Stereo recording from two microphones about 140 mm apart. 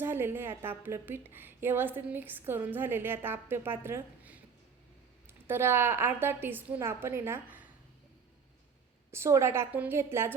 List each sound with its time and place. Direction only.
0.0 s a woman's voice: 15° right (ahead or behind)
5.5 s a woman's voice: 15° right (ahead or behind)
9.1 s a woman's voice: 20° right (ahead or behind)